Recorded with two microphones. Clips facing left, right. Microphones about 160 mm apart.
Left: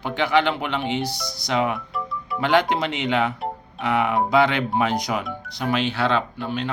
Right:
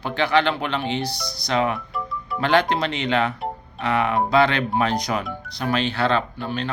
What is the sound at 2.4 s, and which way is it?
Speech, 15° left (ahead or behind).